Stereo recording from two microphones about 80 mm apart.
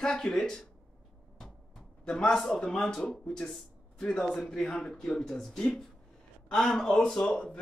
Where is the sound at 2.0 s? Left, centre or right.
Centre.